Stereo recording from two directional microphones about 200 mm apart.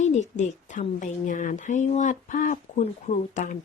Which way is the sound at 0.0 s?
35° left (ahead or behind).